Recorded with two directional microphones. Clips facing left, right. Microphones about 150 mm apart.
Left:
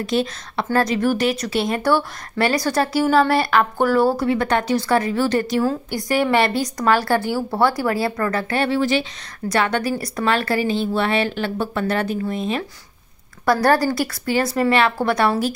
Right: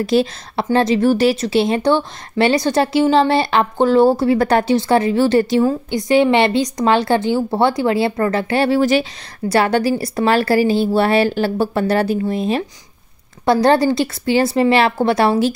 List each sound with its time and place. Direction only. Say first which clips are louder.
0.0 s speech: right 5 dB; 35° right (ahead or behind)
13.5 s speech: right 4 dB; 25° right (ahead or behind)